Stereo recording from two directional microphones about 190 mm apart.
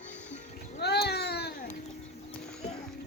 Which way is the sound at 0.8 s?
60° left (ahead or behind).